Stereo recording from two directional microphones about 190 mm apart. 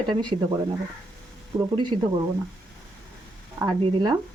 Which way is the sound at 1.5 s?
20° right (ahead or behind).